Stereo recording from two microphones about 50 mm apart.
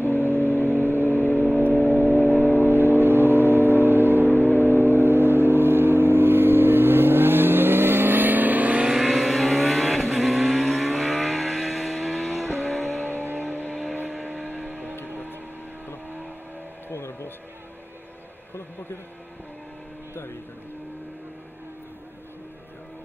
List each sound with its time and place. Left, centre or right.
0.0 s vehicle: left
0.7 s vehicle: right
1.0 s vehicle: left
3.0 s steam whistle: right
4.6 s vehicle: right
8.8 s vehicle: centre
12.6 s vehicle: left
14.4 s vehicle: right
16.9 s music: left